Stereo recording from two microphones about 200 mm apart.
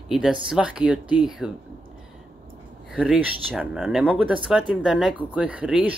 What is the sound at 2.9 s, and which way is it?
Speech, 5° right (ahead or behind).